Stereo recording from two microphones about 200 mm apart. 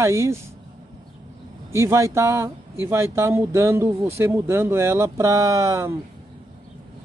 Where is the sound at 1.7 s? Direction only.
15° right (ahead or behind).